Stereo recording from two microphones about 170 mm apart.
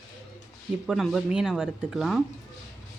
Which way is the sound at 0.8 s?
Centre (ahead or behind).